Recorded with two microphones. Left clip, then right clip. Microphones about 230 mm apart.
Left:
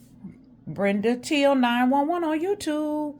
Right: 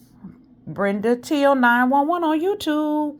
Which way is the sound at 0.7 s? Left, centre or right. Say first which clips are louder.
Right 3 dB; centre.